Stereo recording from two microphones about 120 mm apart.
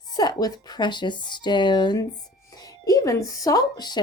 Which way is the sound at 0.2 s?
35° left (ahead or behind).